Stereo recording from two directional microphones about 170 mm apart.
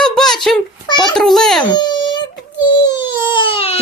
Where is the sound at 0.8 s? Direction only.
25° left (ahead or behind).